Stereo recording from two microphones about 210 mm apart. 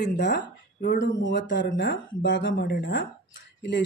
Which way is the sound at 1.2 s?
55° left (ahead or behind).